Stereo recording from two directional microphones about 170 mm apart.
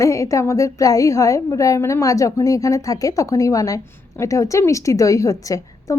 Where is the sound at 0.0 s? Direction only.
20° left (ahead or behind).